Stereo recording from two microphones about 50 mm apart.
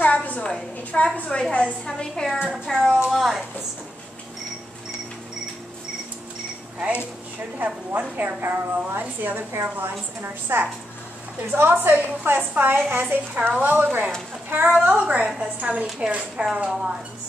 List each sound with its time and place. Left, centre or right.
0.0 s a sound: left
0.9 s a woman's voice: left
2.3 s speech: centre
2.7 s a woman's voice: centre
3.1 s a woman's voice: centre
6.8 s a woman's voice: right